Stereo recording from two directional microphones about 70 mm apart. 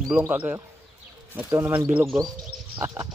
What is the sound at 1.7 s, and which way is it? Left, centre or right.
Speech, right.